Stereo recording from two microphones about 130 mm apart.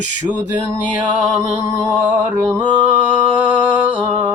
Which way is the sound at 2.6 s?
35° right (ahead or behind).